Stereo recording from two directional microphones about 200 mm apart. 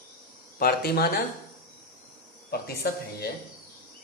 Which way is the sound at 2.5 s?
50° left (ahead or behind).